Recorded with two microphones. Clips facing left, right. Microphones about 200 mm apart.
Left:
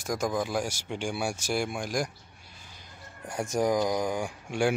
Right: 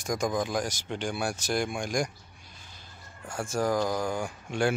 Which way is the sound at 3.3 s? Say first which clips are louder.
Left 2 dB; 20° left (ahead or behind).